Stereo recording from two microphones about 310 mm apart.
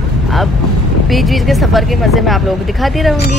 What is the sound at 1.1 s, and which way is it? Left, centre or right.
Speech, centre.